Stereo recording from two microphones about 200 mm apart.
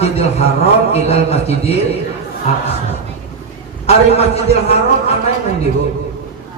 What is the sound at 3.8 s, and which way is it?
Speech, 30° left (ahead or behind).